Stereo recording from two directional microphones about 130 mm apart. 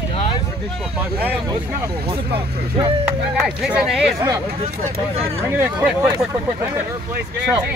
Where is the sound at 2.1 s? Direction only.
45° right (ahead or behind).